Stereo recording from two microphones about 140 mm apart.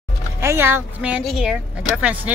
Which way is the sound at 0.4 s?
15° right (ahead or behind).